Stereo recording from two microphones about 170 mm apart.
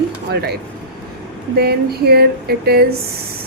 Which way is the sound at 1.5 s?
70° right (ahead or behind).